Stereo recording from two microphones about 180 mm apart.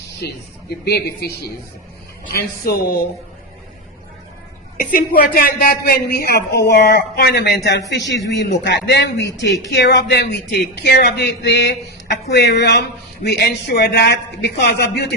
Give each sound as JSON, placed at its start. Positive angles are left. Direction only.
{"t": 0.9, "sound": "a man's voice", "side_deg": 60}
{"t": 2.3, "sound": "a man's voice", "side_deg": 55}
{"t": 4.9, "sound": "a man's voice", "side_deg": 50}
{"t": 7.9, "sound": "a man's voice", "side_deg": 80}